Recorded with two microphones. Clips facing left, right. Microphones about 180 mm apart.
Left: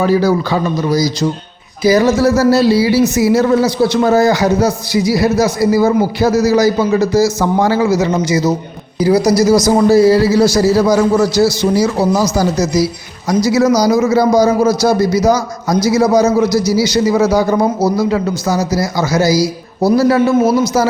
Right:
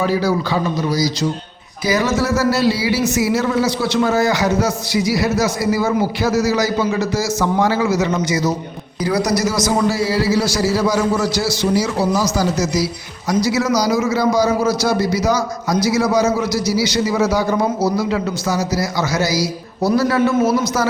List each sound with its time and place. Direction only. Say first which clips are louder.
0.0 s a man's voice: left 5 dB; 45° left (ahead or behind)
1.8 s a man's voice: left 7 dB; 35° left (ahead or behind)